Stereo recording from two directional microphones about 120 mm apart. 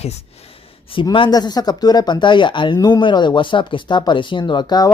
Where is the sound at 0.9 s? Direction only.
45° left (ahead or behind).